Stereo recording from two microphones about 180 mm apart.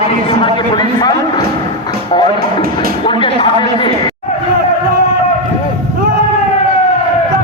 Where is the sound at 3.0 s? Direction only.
30° left (ahead or behind).